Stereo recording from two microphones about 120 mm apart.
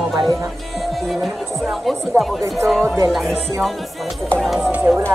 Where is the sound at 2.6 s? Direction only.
Centre (ahead or behind).